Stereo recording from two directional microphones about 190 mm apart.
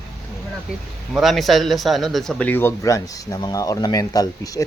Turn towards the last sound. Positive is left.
turn(degrees=20)  # may be behind; listen again after turning